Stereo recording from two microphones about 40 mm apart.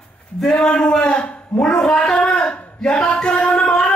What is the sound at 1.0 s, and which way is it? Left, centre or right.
Speech, left.